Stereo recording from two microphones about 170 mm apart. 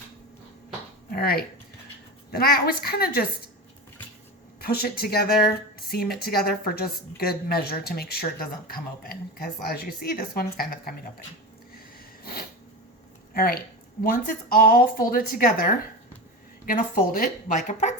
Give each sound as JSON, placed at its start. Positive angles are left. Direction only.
{"t": 1.1, "sound": "a woman's voice", "side_deg": 65}
{"t": 4.6, "sound": "a woman's voice", "side_deg": 65}
{"t": 12.2, "sound": "a sound", "side_deg": 60}
{"t": 13.3, "sound": "a woman's voice", "side_deg": 60}